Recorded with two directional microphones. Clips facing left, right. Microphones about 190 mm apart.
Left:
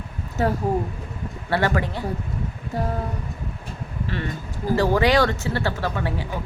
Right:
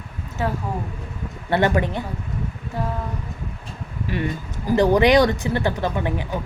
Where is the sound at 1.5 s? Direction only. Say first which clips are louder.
Right 3 dB; 20° right (ahead or behind).